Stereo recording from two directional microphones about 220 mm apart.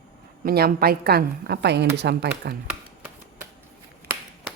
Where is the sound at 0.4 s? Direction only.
45° right (ahead or behind).